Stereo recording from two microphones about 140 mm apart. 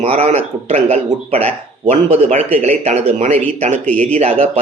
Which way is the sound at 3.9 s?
10° left (ahead or behind).